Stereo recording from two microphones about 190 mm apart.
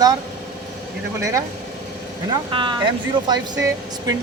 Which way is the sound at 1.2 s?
15° right (ahead or behind).